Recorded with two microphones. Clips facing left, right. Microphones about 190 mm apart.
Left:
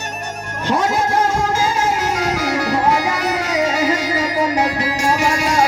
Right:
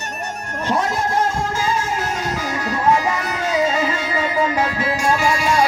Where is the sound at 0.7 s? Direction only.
90° left; by 5.5 s 75° left (ahead or behind).